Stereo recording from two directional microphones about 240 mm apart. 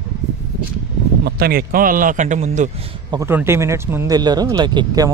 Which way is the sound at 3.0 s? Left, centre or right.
Centre.